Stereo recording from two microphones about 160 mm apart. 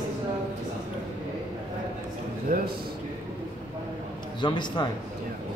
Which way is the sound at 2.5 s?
65° right (ahead or behind).